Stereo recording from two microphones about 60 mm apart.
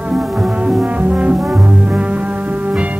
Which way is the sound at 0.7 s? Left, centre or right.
Centre.